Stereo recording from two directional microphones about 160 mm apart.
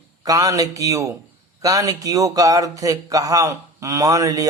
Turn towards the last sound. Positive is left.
turn(degrees=-20)  # may be behind; listen again after turning